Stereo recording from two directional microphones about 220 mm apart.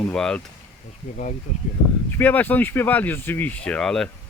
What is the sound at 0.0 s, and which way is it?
Speech, 5° left (ahead or behind).